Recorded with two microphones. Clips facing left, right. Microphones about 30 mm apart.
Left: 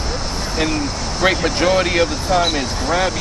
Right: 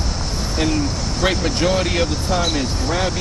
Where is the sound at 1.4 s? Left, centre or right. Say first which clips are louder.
Left 3 dB; left.